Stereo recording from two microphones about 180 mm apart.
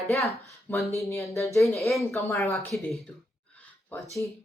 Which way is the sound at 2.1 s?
15° left (ahead or behind).